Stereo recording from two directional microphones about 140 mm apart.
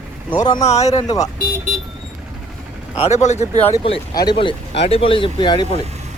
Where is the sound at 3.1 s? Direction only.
55° left (ahead or behind).